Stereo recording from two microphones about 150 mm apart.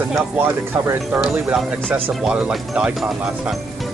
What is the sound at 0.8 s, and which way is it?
Speech, 15° right (ahead or behind).